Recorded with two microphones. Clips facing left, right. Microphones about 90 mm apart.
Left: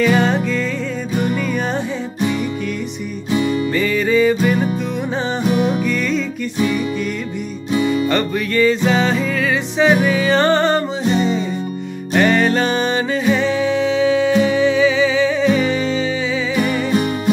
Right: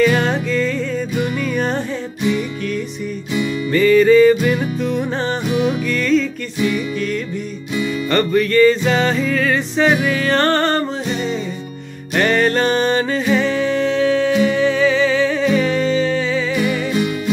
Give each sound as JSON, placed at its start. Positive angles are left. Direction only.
{"t": 0.0, "sound": "music", "side_deg": 0}
{"t": 3.3, "sound": "music", "side_deg": 40}
{"t": 3.7, "sound": "music", "side_deg": 5}
{"t": 5.5, "sound": "music", "side_deg": 40}
{"t": 5.9, "sound": "music", "side_deg": 10}
{"t": 7.7, "sound": "music", "side_deg": 35}
{"t": 8.1, "sound": "music", "side_deg": 5}
{"t": 12.1, "sound": "music", "side_deg": 5}